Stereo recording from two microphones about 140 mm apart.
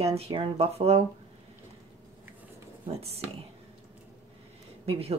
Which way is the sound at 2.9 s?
45° right (ahead or behind).